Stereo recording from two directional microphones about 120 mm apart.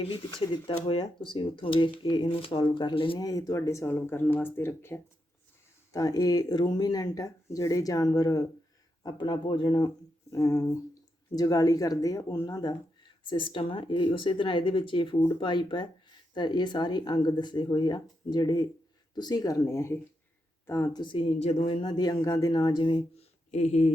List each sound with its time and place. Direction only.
0.0 s speech: 45° left (ahead or behind)
3.2 s speech: 30° left (ahead or behind)
5.9 s speech: 30° left (ahead or behind)
10.3 s speech: 25° left (ahead or behind)
13.3 s speech: 45° left (ahead or behind); by 21.0 s 25° left (ahead or behind)
21.0 s speech: 45° left (ahead or behind)
23.1 s a sound: 75° left (ahead or behind)